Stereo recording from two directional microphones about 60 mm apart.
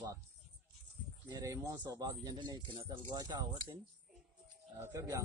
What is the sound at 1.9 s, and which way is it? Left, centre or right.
Speech, right.